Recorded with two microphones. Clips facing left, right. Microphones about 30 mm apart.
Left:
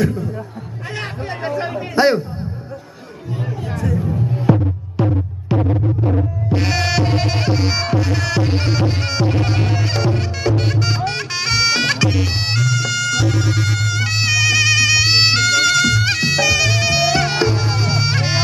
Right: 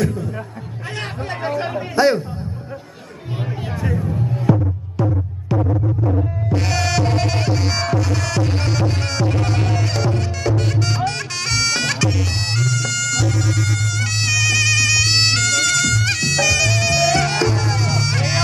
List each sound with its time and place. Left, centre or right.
0.0 s music: centre
2.0 s speech: centre
4.0 s music: centre
6.5 s music: centre
11.1 s bagpipes: centre